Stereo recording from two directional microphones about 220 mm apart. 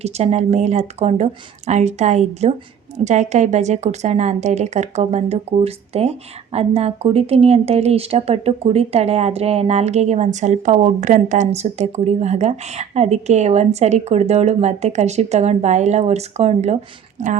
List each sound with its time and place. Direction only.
0.0 s a woman's voice: 30° right (ahead or behind)